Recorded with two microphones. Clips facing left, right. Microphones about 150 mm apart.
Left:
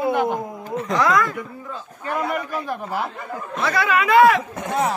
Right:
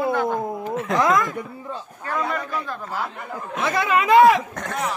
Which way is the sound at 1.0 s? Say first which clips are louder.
Left 1 dB; 20° right (ahead or behind).